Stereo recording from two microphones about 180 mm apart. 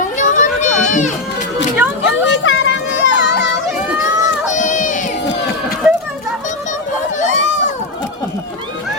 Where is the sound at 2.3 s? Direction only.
90° left.